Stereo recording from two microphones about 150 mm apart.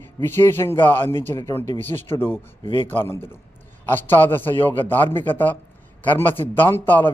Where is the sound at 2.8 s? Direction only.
15° left (ahead or behind).